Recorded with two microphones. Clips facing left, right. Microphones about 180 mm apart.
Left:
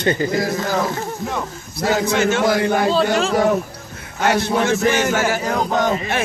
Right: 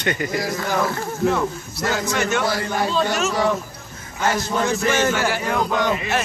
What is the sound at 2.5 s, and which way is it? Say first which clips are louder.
Speech: left 7 dB; 60° left (ahead or behind).